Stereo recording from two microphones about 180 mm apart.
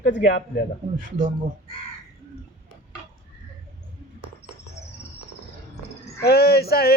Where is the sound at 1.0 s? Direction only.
50° right (ahead or behind).